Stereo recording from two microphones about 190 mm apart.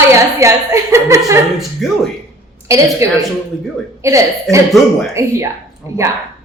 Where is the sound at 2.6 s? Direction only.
15° right (ahead or behind).